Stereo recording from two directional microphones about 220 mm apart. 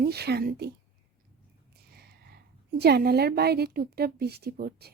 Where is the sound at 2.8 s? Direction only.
45° right (ahead or behind).